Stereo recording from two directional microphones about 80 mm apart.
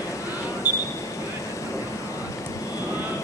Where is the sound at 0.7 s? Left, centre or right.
Right.